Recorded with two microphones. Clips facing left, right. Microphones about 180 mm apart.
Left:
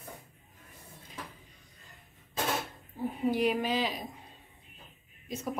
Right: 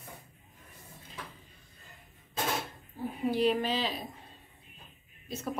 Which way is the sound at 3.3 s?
10° left (ahead or behind).